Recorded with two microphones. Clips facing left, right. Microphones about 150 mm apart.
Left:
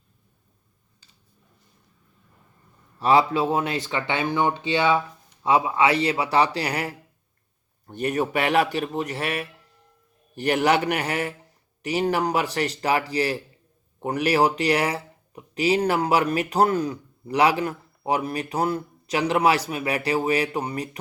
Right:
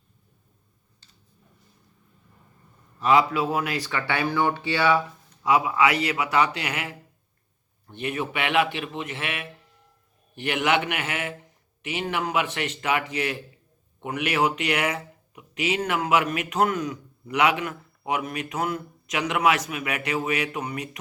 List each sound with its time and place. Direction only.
3.0 s speech: 30° left (ahead or behind)